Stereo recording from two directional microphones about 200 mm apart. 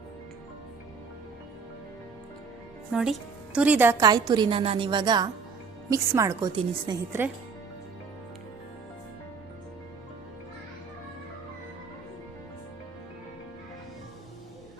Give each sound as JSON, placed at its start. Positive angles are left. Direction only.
{"t": 2.9, "sound": "a woman's voice", "side_deg": -5}